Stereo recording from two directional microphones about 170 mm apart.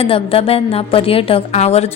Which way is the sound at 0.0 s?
35° left (ahead or behind).